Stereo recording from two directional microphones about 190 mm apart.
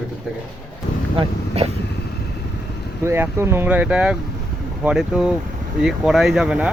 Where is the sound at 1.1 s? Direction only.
30° right (ahead or behind).